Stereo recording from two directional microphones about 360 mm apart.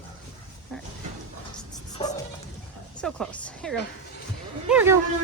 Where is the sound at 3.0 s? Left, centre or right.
Centre.